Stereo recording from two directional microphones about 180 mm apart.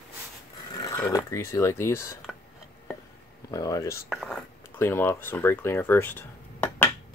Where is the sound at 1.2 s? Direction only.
15° left (ahead or behind).